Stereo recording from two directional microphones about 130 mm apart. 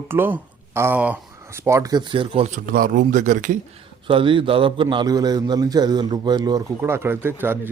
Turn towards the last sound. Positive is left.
turn(degrees=-15)  # may be behind; listen again after turning